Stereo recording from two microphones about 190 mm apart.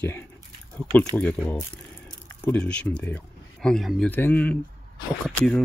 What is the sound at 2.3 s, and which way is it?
Speech, 10° left (ahead or behind).